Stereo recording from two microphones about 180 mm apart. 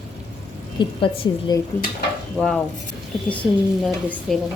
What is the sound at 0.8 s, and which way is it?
Speech, 25° left (ahead or behind).